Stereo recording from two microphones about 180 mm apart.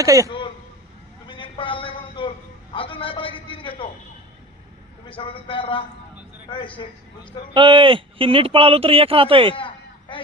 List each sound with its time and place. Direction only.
0.0 s speech: 20° right (ahead or behind)
0.3 s throat clearing: 25° left (ahead or behind)
1.3 s a sound: 30° left (ahead or behind)
2.7 s a man's voice: 30° left (ahead or behind)
5.0 s a man's voice: 30° left (ahead or behind)
7.5 s speech: 25° right (ahead or behind)
9.6 s a sound: 25° left (ahead or behind)